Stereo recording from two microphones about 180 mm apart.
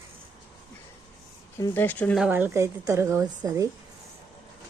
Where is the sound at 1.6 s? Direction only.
10° left (ahead or behind).